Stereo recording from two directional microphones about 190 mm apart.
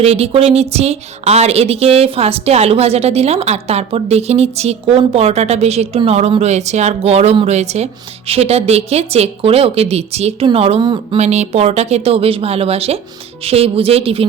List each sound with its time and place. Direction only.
0.0 s a woman's voice: 35° right (ahead or behind)
11.2 s a woman's voice: 35° right (ahead or behind)